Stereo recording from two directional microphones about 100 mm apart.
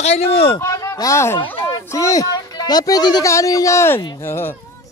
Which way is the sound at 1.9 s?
35° left (ahead or behind).